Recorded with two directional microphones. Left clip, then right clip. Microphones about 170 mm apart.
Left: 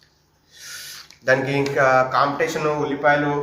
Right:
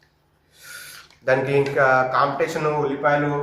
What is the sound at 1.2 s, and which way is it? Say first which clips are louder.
A man's voice: even; 10° left (ahead or behind).